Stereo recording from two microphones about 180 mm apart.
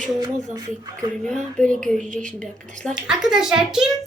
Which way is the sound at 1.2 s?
5° left (ahead or behind).